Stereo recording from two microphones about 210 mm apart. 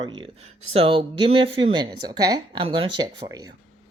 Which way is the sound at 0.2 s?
25° right (ahead or behind).